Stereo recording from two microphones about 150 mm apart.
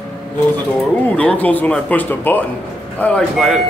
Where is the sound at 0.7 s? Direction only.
10° left (ahead or behind).